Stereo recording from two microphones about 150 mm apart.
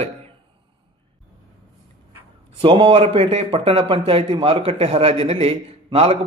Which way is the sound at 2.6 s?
35° right (ahead or behind).